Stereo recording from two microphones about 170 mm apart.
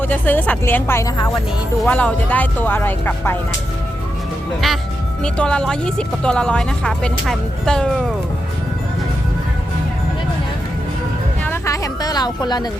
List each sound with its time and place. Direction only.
0.0 s speech: 10° left (ahead or behind)
4.6 s speech: centre (ahead or behind)
11.4 s a sound: 15° left (ahead or behind)